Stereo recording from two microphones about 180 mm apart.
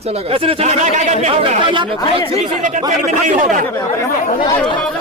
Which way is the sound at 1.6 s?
25° right (ahead or behind).